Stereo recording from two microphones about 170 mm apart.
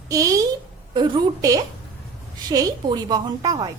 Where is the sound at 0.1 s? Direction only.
20° right (ahead or behind).